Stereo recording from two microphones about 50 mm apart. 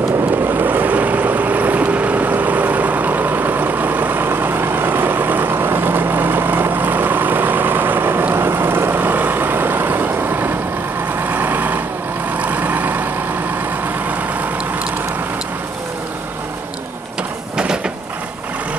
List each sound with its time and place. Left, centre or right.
0.5 s boat: right
11.2 s vehicle: right
17.6 s vehicle: centre